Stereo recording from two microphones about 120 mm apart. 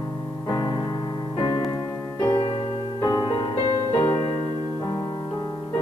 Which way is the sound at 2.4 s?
55° left (ahead or behind).